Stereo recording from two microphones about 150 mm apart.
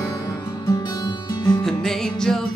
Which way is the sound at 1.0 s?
25° left (ahead or behind).